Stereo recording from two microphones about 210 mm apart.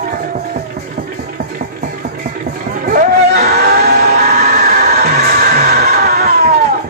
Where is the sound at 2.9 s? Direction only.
45° right (ahead or behind).